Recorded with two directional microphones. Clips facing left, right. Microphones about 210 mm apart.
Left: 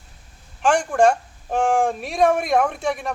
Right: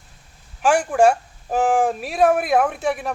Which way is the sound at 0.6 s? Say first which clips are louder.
Right 1 dB; 5° right (ahead or behind).